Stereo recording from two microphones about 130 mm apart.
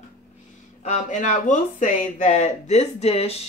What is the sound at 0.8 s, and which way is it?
Speech, 70° left (ahead or behind).